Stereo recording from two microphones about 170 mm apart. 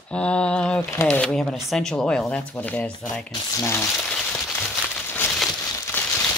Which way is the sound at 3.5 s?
15° left (ahead or behind).